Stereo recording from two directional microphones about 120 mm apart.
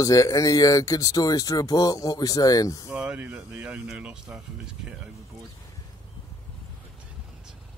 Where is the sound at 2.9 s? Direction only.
10° right (ahead or behind).